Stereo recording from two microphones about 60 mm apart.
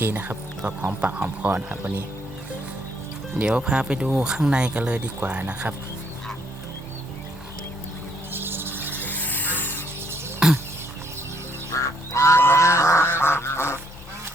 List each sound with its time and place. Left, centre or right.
0.0 s speech: right
3.3 s speech: centre
8.3 s a sound: right
9.0 s music: left
10.4 s a sound: centre
11.7 s goose: left